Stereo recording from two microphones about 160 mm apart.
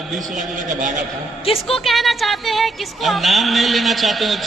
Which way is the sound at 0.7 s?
50° right (ahead or behind).